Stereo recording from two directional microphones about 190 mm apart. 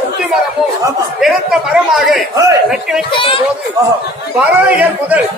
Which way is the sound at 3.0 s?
25° left (ahead or behind).